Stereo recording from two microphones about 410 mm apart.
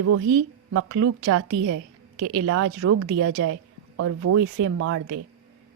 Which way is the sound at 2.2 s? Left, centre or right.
Right.